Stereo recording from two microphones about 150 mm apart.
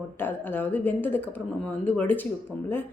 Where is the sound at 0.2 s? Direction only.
15° left (ahead or behind).